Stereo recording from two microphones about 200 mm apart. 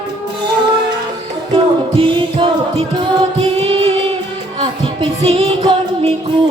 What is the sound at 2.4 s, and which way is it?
Music, 25° right (ahead or behind).